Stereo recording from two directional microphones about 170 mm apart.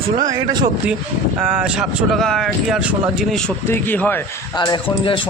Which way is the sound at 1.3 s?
5° right (ahead or behind).